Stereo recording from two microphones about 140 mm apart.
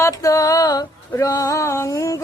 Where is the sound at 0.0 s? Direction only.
25° left (ahead or behind).